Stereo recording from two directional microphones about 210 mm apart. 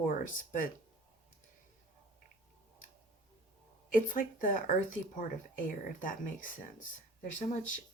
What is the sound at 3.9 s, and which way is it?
Speech, 40° left (ahead or behind).